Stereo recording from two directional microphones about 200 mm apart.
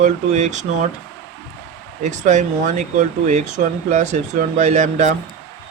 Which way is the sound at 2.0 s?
35° right (ahead or behind).